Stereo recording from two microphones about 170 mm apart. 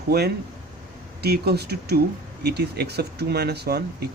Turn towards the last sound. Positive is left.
turn(degrees=-70)  # may be behind; listen again after turning